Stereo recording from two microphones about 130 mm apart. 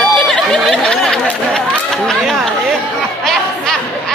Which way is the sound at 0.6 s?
5° left (ahead or behind).